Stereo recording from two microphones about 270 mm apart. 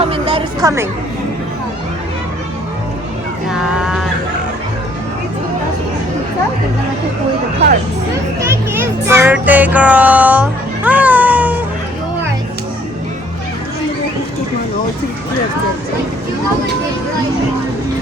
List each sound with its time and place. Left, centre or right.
0.0 s music: centre
3.5 s a sound: centre
8.4 s music: centre